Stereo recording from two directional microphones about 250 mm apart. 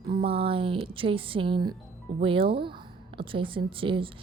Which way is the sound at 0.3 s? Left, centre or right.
Right.